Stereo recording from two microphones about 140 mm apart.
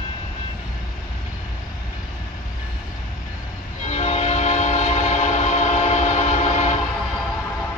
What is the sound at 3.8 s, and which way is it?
Train, 50° left (ahead or behind).